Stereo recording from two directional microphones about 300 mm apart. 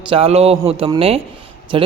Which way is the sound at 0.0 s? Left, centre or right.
Centre.